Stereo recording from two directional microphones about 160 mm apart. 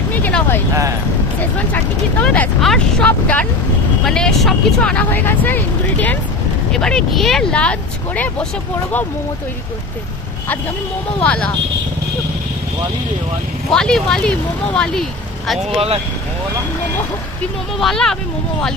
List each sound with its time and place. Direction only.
0.1 s speech: 10° left (ahead or behind)
11.2 s speech: 10° left (ahead or behind)
13.7 s speech: 5° left (ahead or behind)
15.7 s speech: 40° right (ahead or behind)
17.7 s speech: centre (ahead or behind)